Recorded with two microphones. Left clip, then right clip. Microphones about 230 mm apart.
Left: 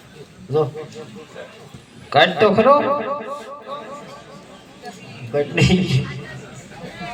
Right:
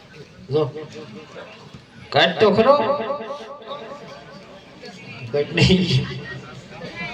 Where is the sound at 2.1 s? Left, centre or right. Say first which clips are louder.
Left 2 dB; right.